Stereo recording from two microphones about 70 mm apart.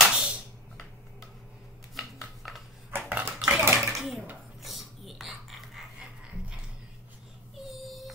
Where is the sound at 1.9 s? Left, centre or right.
Centre.